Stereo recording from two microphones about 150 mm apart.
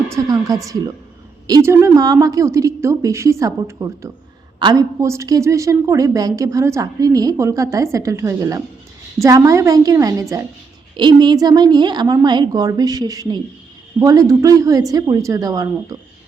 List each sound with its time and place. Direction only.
0.1 s a woman's voice: 25° right (ahead or behind)